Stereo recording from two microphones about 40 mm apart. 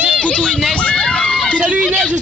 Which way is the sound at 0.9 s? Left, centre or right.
Centre.